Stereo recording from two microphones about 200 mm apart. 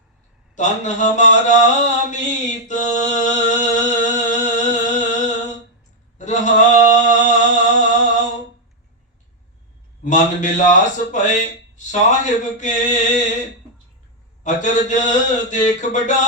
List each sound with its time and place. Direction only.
0.5 s mantra: 35° left (ahead or behind)
6.1 s a sound: 35° left (ahead or behind)
10.0 s speech: 40° left (ahead or behind)
14.4 s speech: 40° left (ahead or behind)